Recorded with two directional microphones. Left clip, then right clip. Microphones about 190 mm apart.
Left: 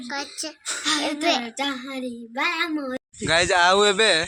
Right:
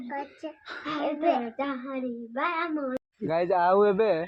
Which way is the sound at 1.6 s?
35° left (ahead or behind).